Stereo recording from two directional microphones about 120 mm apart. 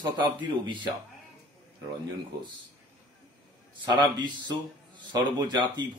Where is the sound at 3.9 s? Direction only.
40° right (ahead or behind).